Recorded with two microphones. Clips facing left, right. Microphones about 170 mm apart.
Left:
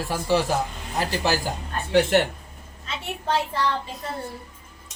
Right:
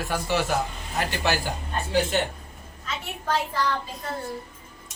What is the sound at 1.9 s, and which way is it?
Speech, 65° left (ahead or behind).